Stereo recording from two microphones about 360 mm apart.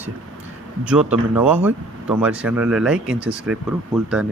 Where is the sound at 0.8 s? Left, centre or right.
Centre.